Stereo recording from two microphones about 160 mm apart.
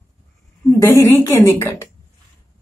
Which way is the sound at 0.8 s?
15° left (ahead or behind).